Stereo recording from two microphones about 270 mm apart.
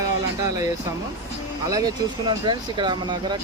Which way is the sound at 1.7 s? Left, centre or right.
Centre.